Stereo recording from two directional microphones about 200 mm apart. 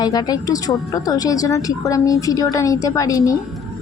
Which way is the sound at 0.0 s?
20° left (ahead or behind).